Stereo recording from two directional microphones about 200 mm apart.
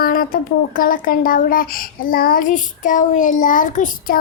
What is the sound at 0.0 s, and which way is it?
Speech, 45° left (ahead or behind).